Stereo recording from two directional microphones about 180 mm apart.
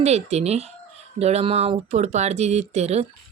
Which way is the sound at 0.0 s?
35° right (ahead or behind).